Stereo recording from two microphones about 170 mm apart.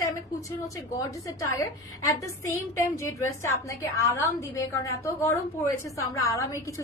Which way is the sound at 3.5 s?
20° left (ahead or behind).